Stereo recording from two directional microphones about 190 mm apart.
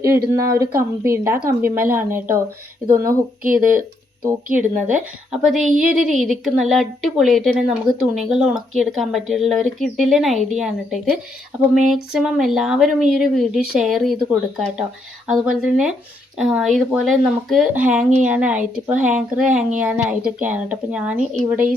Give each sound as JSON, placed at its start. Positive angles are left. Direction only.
{"t": 0.6, "sound": "speech", "side_deg": -15}
{"t": 3.4, "sound": "speech", "side_deg": -45}
{"t": 4.5, "sound": "a woman's voice", "side_deg": -5}